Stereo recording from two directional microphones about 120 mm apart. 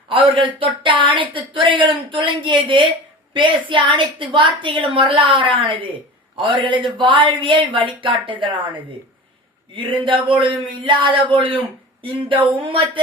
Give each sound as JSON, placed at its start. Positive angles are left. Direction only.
{"t": 0.1, "sound": "speech", "side_deg": -45}
{"t": 12.6, "sound": "speech", "side_deg": -45}